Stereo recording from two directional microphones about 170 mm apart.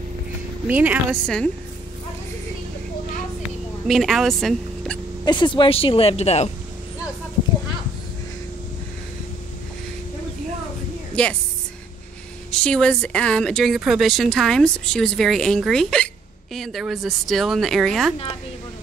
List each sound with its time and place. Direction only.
0.7 s a woman's voice: 10° right (ahead or behind)
1.2 s speech: 5° left (ahead or behind)
3.8 s speech: centre (ahead or behind)
5.2 s speech: 25° left (ahead or behind)
11.2 s speech: 5° left (ahead or behind)
12.4 s speech: 5° left (ahead or behind)